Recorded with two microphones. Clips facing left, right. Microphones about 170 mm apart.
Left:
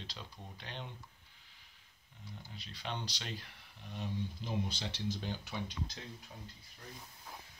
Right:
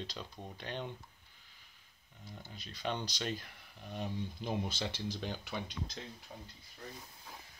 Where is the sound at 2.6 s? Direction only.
45° right (ahead or behind).